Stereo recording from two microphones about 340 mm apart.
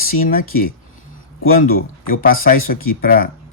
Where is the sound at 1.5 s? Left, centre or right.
Left.